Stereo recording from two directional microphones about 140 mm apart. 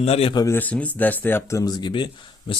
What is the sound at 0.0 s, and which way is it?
Speech, 45° left (ahead or behind).